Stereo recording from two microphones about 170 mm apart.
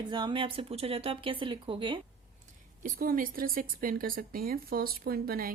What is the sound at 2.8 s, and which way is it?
Speech, 55° right (ahead or behind).